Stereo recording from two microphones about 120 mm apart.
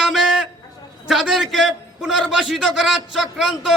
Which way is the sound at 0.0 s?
5° right (ahead or behind).